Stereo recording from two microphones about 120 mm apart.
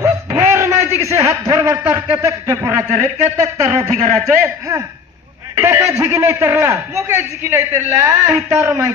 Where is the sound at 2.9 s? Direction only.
85° right.